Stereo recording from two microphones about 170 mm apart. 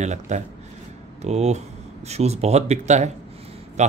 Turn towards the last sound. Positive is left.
turn(degrees=-45)  # may be behind; listen again after turning